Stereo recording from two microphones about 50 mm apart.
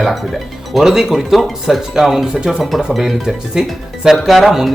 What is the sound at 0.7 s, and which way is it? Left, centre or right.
Speech, centre.